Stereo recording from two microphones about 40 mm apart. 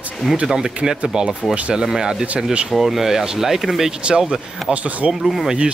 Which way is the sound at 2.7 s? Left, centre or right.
Centre.